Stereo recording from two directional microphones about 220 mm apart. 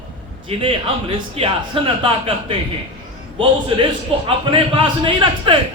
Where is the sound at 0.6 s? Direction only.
25° right (ahead or behind).